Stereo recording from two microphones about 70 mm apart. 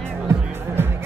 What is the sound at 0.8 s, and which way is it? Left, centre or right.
Music, right.